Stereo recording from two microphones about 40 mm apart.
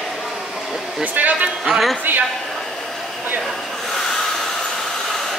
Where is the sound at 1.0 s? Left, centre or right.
Right.